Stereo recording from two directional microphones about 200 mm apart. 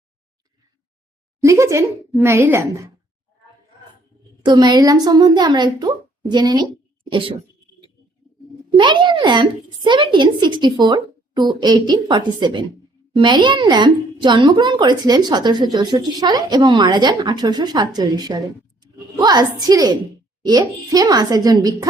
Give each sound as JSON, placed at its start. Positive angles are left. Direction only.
{"t": 1.4, "sound": "speech", "side_deg": -15}
{"t": 4.4, "sound": "a woman's voice", "side_deg": -20}
{"t": 8.7, "sound": "a woman's voice", "side_deg": -25}